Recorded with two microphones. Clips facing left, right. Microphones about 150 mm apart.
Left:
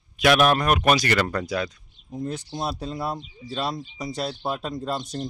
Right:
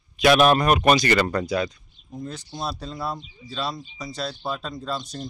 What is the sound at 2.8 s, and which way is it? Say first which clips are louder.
Speech: left 3 dB; 15° left (ahead or behind).